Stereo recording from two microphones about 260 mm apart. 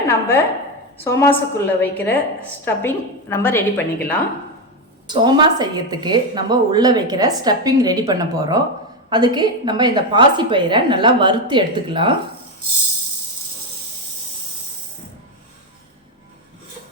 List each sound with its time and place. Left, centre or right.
0.1 s a woman's voice: centre
5.0 s a woman's voice: centre